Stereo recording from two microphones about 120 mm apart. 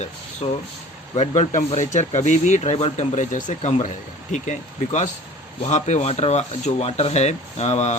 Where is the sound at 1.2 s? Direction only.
70° left (ahead or behind).